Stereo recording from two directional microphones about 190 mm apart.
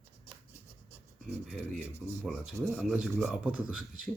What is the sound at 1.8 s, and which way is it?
Speech, 10° right (ahead or behind).